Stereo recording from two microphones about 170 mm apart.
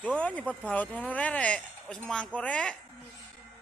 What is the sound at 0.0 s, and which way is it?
Speech, 5° left (ahead or behind).